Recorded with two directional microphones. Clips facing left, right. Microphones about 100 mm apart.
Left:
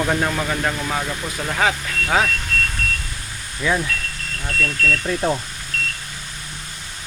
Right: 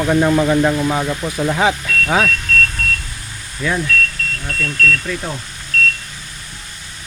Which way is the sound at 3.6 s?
5° left (ahead or behind).